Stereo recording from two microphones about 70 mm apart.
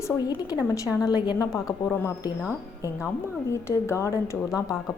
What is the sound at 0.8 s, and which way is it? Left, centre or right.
Speech, left.